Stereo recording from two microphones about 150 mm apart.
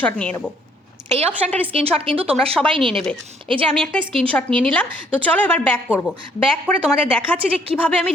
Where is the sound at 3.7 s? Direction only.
5° left (ahead or behind).